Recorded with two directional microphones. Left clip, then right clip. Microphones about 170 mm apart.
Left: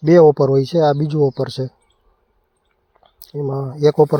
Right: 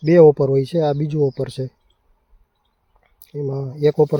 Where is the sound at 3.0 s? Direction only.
Centre (ahead or behind).